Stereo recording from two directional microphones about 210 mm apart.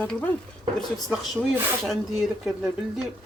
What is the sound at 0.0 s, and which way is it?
Speech, 5° left (ahead or behind).